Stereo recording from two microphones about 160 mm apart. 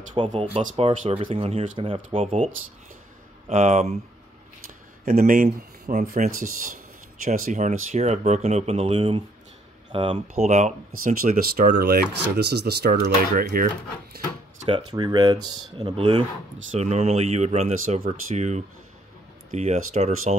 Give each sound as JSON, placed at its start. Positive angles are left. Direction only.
{"t": 0.3, "sound": "speech", "side_deg": -40}
{"t": 3.4, "sound": "speech", "side_deg": -50}
{"t": 5.0, "sound": "speech", "side_deg": -60}
{"t": 14.7, "sound": "speech", "side_deg": -30}